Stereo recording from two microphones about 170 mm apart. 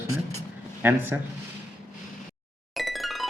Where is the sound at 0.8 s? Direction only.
10° right (ahead or behind).